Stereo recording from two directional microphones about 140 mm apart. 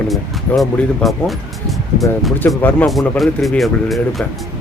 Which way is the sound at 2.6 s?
15° left (ahead or behind).